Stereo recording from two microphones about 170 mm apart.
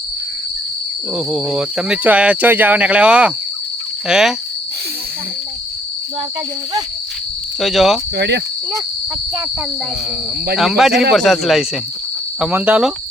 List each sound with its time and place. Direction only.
1.1 s speech: centre (ahead or behind)
7.6 s speech: centre (ahead or behind)
8.1 s cricket: 85° right
10.6 s speech: centre (ahead or behind)